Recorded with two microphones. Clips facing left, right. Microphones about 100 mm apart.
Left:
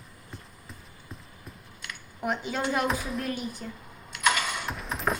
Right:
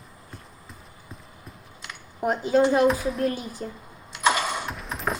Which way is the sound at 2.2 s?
40° right (ahead or behind).